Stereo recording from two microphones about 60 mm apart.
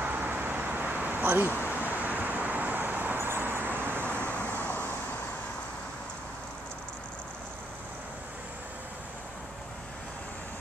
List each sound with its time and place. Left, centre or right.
0.0 s vehicle: right
4.3 s vehicle: left